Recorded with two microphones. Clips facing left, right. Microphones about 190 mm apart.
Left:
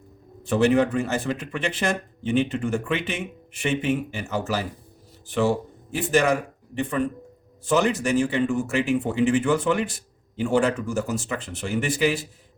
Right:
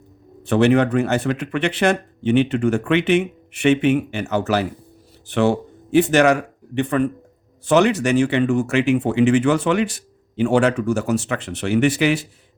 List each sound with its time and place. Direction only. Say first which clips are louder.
0.4 s a man's voice: right 4 dB; 65° right (ahead or behind)